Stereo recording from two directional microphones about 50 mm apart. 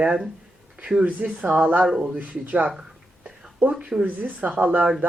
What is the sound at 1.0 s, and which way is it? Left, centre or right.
Speech, right.